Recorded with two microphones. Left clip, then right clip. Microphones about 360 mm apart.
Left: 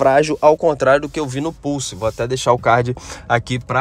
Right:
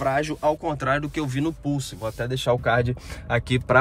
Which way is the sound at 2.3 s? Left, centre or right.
Left.